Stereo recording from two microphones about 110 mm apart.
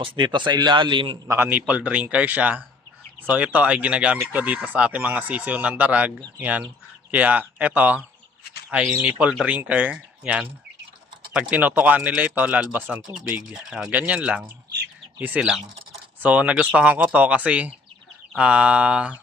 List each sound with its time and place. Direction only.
0.0 s a man's voice: 45° right (ahead or behind)
1.3 s speech: 20° right (ahead or behind)